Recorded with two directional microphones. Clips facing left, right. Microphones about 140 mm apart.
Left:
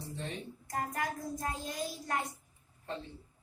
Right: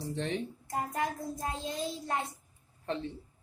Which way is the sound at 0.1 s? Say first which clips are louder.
Right 8 dB; 90° right.